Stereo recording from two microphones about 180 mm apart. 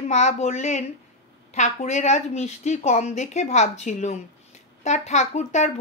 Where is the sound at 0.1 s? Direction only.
40° left (ahead or behind).